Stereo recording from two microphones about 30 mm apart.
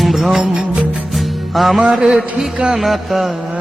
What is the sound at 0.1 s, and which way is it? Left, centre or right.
Music, centre.